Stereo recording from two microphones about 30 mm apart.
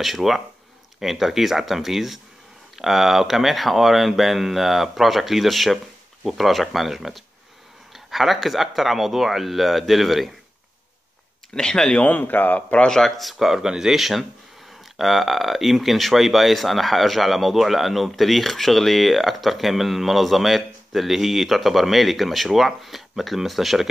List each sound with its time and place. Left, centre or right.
0.0 s speech: centre
11.5 s speech: left
12.1 s a man's voice: left
13.2 s speech: centre
13.6 s speech: centre